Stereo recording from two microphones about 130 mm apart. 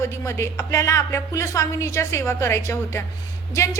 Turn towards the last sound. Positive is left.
turn(degrees=25)  # may be behind; listen again after turning